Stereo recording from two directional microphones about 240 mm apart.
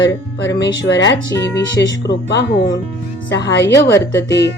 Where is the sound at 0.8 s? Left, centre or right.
Left.